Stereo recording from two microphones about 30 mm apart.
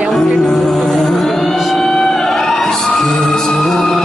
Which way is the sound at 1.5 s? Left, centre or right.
Centre.